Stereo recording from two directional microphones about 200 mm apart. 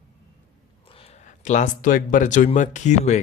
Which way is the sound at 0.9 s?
30° left (ahead or behind).